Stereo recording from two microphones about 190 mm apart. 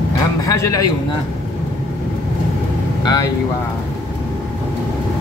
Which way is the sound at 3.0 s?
20° left (ahead or behind).